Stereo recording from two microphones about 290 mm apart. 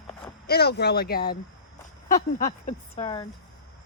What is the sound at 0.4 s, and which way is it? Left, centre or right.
Speech, left.